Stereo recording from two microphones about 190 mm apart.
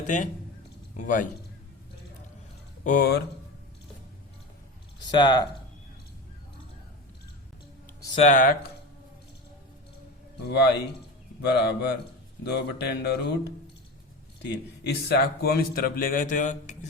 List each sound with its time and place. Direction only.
0.9 s a man's voice: 45° left (ahead or behind)
2.8 s a man's voice: 50° left (ahead or behind)
4.9 s speech: 25° left (ahead or behind)
8.2 s a man's voice: 40° left (ahead or behind)
10.5 s a man's voice: 60° left (ahead or behind); by 16.7 s 40° left (ahead or behind)